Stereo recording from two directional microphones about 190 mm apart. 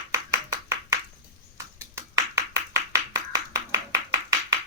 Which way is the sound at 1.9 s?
15° right (ahead or behind).